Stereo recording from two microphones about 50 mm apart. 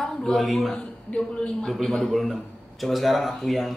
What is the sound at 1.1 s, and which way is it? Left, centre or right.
Speech, left.